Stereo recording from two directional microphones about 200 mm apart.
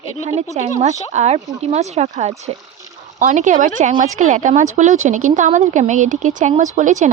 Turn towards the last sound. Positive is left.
turn(degrees=-40)  # may be behind; listen again after turning